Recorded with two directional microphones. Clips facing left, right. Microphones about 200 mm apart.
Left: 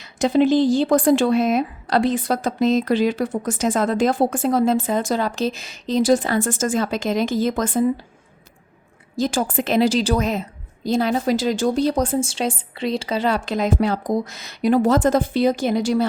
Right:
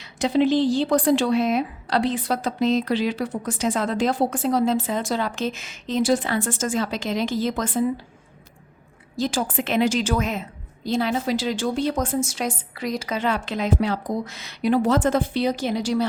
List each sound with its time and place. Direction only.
0.0 s speech: 45° left (ahead or behind)
9.1 s a woman's voice: 45° left (ahead or behind)